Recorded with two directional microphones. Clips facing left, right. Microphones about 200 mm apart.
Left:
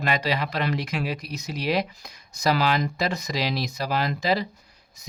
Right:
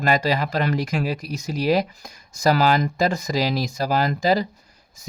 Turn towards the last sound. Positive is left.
turn(degrees=-45)  # may be behind; listen again after turning